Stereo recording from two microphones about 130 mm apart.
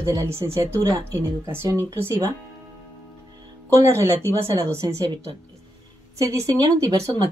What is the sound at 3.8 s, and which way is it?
A woman's voice, 20° right (ahead or behind).